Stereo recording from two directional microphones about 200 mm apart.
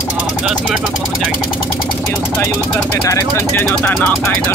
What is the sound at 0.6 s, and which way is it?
Speech, centre (ahead or behind).